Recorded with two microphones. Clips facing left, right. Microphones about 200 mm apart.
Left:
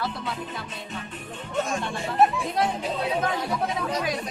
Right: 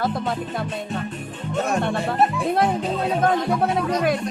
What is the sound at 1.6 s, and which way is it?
Music, 60° right (ahead or behind).